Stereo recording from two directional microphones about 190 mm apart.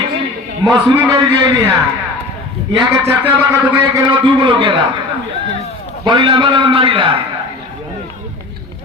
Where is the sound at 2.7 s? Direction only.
15° right (ahead or behind).